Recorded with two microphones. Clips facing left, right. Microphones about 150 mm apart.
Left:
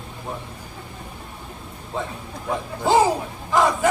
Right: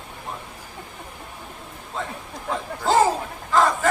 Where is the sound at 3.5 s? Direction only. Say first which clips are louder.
Even; 15° left (ahead or behind).